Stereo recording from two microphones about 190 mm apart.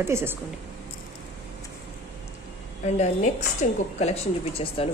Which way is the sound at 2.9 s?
35° left (ahead or behind).